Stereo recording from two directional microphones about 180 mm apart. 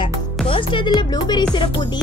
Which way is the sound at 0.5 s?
30° left (ahead or behind).